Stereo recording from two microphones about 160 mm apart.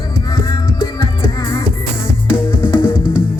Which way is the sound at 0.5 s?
25° left (ahead or behind).